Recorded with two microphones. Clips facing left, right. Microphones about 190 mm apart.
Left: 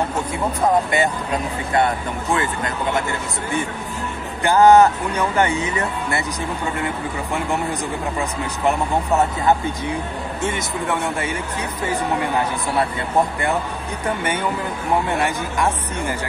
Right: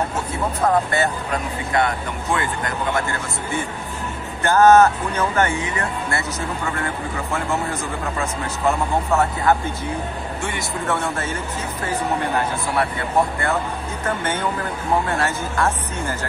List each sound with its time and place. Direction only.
0.9 s speech: 20° left (ahead or behind)
4.4 s speech: 15° left (ahead or behind)
8.2 s speech: 20° left (ahead or behind)
14.0 s speech: 15° left (ahead or behind)